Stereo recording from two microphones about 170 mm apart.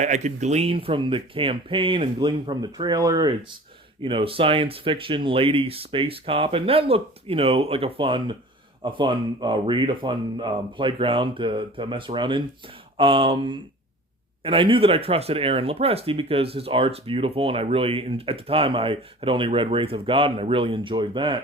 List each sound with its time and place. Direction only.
0.0 s speech: 45° right (ahead or behind)